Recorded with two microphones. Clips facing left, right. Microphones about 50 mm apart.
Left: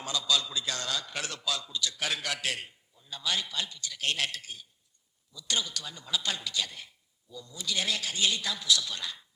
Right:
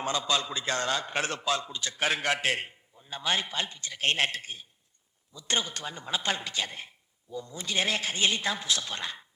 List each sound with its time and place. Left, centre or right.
0.0 s a man's voice: right